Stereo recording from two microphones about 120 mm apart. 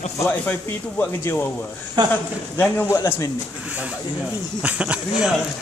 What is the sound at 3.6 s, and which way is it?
Speech, 10° right (ahead or behind).